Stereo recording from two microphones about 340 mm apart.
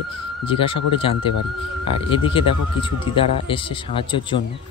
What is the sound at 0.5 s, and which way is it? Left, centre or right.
Speech, centre.